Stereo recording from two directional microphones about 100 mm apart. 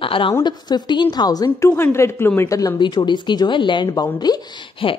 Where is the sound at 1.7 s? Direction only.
25° left (ahead or behind).